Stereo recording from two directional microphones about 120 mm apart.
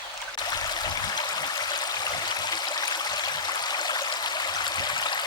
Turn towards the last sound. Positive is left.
turn(degrees=35)  # may be behind; listen again after turning